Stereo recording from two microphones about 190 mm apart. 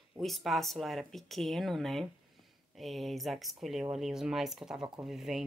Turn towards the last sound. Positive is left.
turn(degrees=0)  # may be behind; listen again after turning